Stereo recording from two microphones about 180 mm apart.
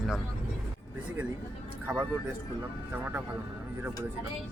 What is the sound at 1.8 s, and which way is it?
Speech, 10° right (ahead or behind).